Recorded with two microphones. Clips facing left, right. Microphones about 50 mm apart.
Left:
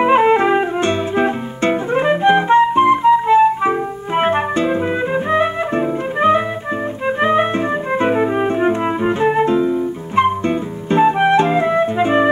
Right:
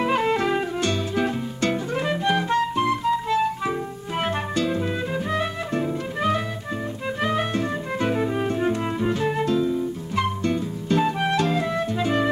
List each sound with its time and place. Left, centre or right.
0.0 s music: left